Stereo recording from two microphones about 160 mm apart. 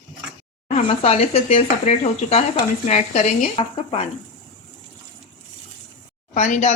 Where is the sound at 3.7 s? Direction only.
40° left (ahead or behind).